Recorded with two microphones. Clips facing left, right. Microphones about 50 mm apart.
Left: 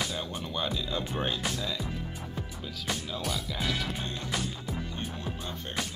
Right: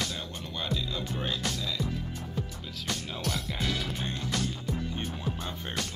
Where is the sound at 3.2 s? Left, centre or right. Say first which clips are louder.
Even; centre.